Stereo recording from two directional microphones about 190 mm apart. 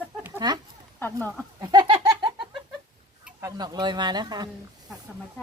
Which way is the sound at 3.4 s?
20° right (ahead or behind).